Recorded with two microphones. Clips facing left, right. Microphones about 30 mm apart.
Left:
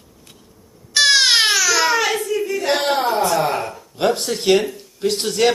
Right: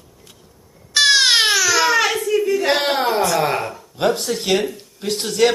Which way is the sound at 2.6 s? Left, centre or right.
Right.